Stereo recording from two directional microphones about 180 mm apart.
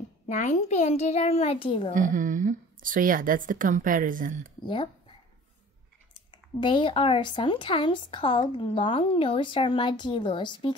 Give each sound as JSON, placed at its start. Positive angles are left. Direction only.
{"t": 0.3, "sound": "a child's voice", "side_deg": 40}
{"t": 2.0, "sound": "a woman's voice", "side_deg": -45}
{"t": 4.6, "sound": "speech", "side_deg": 25}
{"t": 6.1, "sound": "speech", "side_deg": 25}